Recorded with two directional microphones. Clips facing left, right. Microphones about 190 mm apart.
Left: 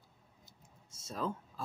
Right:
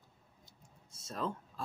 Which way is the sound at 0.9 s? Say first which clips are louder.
Left 1 dB; centre (ahead or behind).